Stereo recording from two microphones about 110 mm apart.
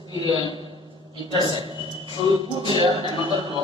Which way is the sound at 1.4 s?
45° right (ahead or behind).